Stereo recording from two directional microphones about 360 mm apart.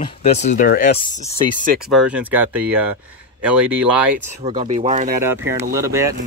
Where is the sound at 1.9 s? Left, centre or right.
Centre.